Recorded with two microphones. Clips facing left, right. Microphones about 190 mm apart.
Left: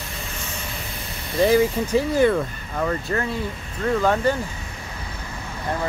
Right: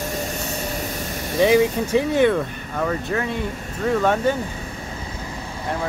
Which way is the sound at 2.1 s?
Centre (ahead or behind).